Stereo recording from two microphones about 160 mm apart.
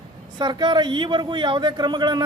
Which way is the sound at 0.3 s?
30° right (ahead or behind).